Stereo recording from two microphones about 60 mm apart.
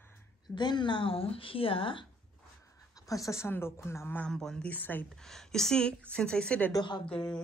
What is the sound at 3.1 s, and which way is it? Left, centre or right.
Speech, left.